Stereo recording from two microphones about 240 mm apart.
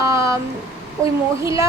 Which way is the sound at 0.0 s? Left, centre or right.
Centre.